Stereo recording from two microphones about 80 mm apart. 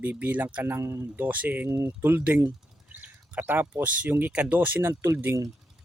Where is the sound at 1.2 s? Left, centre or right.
Right.